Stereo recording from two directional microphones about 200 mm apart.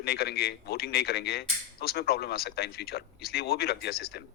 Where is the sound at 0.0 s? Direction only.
50° left (ahead or behind).